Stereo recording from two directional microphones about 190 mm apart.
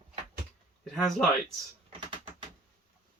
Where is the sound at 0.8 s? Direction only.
5° left (ahead or behind).